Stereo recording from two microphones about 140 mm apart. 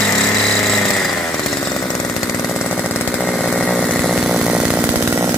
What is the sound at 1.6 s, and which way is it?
Chainsaw, 25° left (ahead or behind).